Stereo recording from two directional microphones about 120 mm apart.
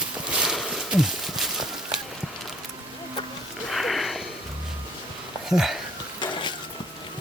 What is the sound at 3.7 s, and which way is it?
Sniff, centre (ahead or behind).